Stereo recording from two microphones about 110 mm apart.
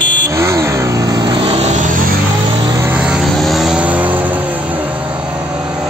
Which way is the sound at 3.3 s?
Centre (ahead or behind).